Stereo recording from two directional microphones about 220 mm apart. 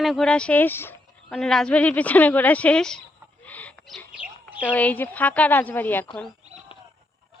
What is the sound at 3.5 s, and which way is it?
Owl, 5° left (ahead or behind).